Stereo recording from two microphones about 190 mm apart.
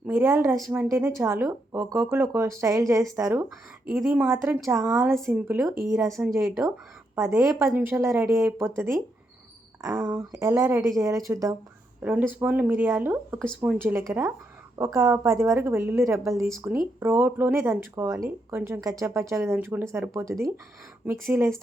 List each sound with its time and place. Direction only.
0.0 s speech: 10° right (ahead or behind)